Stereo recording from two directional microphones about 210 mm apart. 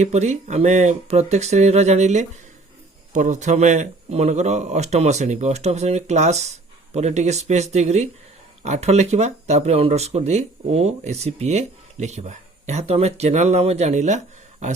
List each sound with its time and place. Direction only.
0.0 s speech: 30° right (ahead or behind)